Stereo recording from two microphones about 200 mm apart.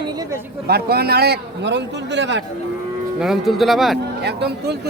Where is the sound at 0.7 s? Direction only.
50° right (ahead or behind).